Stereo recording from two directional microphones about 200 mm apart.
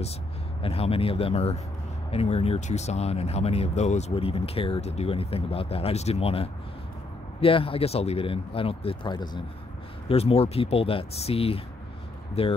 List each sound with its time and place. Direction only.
0.6 s speech: 30° left (ahead or behind)